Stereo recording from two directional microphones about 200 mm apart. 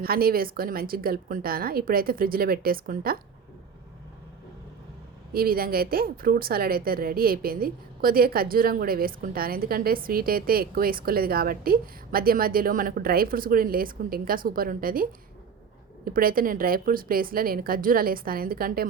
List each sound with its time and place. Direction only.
0.0 s a woman's voice: 50° right (ahead or behind)
5.3 s a woman's voice: 50° right (ahead or behind)
16.0 s a woman's voice: 45° right (ahead or behind)